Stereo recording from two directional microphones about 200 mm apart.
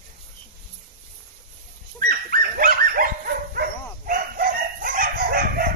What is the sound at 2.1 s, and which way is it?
Dog, 50° right (ahead or behind).